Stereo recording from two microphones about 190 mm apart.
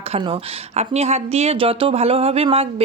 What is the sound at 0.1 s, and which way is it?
Speech, 30° right (ahead or behind).